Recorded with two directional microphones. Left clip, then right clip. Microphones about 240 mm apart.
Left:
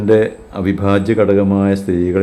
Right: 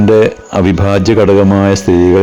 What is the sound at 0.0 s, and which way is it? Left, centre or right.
Speech, right.